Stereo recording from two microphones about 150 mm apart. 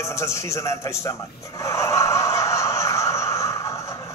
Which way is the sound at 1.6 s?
20° left (ahead or behind).